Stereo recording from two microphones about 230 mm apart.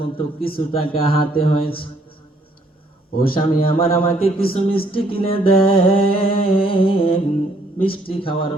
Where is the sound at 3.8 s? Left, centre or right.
Left.